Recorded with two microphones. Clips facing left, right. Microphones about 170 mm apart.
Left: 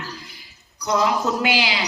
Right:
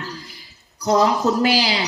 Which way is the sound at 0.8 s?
40° right (ahead or behind).